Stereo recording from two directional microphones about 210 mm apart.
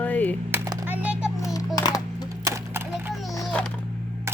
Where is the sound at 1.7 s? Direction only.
20° left (ahead or behind).